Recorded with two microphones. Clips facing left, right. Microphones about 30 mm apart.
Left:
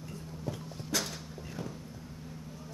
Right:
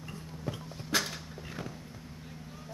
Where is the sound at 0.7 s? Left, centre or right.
Centre.